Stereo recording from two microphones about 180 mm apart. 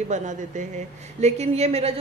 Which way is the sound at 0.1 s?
45° right (ahead or behind).